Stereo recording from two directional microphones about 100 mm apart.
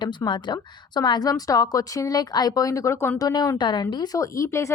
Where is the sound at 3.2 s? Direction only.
40° left (ahead or behind).